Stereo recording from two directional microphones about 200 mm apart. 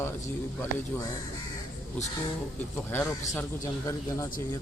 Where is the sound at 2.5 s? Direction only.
10° left (ahead or behind).